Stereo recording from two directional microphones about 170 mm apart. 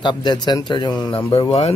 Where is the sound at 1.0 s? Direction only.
10° left (ahead or behind).